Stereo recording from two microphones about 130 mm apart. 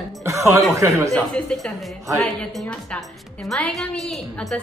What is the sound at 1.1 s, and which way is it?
A woman's voice, 5° left (ahead or behind).